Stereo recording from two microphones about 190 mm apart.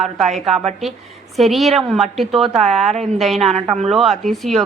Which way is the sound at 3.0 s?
Centre (ahead or behind).